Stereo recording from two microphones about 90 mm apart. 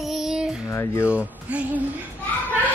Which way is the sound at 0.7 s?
30° left (ahead or behind).